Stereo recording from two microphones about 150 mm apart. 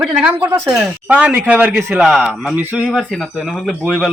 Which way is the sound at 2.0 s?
Centre (ahead or behind).